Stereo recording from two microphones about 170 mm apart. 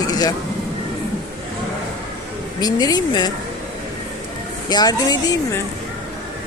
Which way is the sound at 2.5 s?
25° left (ahead or behind).